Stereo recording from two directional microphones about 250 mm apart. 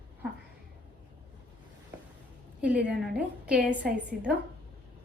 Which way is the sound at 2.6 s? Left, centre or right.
Centre.